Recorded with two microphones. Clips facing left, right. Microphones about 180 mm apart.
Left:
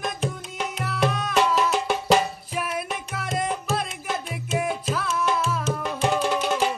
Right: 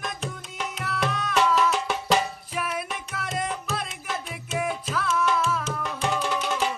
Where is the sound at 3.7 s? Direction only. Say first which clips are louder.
Left 4 dB; 35° left (ahead or behind).